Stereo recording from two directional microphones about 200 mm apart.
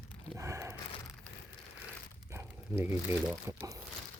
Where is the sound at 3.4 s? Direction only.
15° right (ahead or behind).